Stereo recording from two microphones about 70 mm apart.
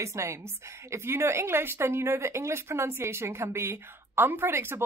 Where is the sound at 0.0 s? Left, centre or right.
Right.